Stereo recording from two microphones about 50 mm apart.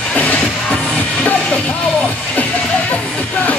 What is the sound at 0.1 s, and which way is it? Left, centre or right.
Music, left.